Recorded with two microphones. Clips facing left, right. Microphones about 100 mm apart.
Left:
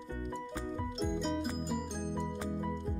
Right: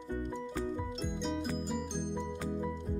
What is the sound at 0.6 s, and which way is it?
Music, centre (ahead or behind).